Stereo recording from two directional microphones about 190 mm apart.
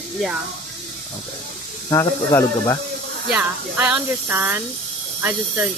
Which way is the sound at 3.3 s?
10° right (ahead or behind).